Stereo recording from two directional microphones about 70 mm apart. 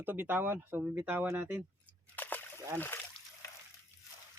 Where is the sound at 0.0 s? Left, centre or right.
Right.